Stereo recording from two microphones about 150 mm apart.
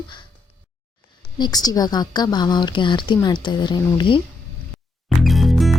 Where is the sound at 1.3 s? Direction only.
25° left (ahead or behind).